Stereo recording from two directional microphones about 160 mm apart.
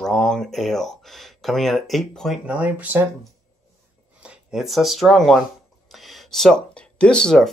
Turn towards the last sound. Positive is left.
turn(degrees=5)  # may be behind; listen again after turning